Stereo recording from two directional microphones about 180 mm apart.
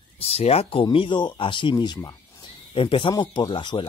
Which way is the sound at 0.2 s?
35° left (ahead or behind).